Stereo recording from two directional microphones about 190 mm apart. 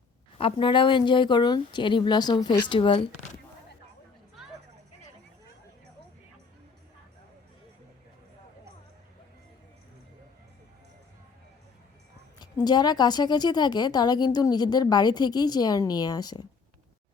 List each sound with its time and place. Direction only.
0.3 s a woman's voice: 25° left (ahead or behind)
12.4 s a woman's voice: 20° left (ahead or behind)